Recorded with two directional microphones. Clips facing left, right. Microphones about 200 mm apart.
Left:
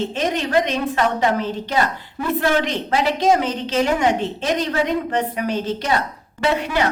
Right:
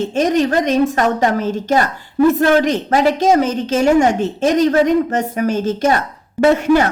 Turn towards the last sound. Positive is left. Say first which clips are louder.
# right 9 dB
turn(degrees=-45)  # may be behind; listen again after turning